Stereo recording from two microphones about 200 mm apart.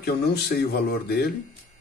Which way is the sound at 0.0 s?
50° left (ahead or behind).